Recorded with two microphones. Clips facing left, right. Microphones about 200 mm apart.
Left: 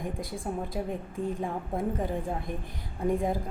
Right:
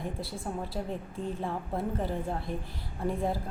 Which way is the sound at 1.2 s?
50° left (ahead or behind).